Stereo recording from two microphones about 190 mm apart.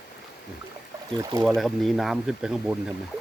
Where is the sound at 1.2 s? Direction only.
15° right (ahead or behind).